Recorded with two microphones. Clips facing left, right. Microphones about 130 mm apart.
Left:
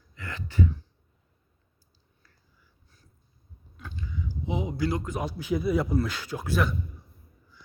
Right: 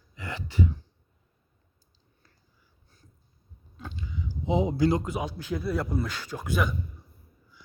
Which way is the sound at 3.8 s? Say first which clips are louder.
Even; 20° right (ahead or behind).